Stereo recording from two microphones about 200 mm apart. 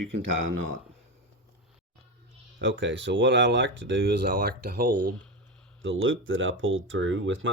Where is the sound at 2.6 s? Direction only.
70° right (ahead or behind); by 4.9 s 50° right (ahead or behind).